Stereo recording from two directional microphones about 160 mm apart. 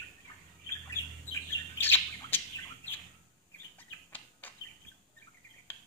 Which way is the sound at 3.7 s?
10° left (ahead or behind).